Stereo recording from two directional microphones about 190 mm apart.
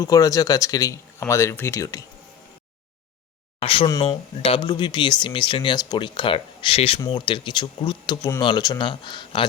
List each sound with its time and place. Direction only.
0.0 s speech: 20° left (ahead or behind)
3.6 s speech: 30° left (ahead or behind)